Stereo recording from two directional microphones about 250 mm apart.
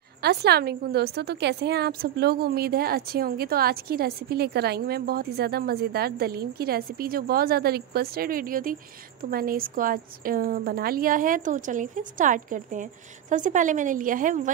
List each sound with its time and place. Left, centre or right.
0.2 s a woman's voice: right